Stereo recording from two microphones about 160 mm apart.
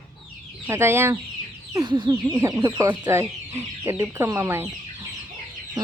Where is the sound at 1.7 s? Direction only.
25° right (ahead or behind).